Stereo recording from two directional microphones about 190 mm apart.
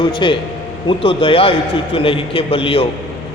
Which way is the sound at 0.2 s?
25° left (ahead or behind).